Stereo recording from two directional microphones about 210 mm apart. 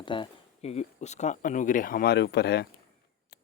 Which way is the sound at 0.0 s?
25° left (ahead or behind).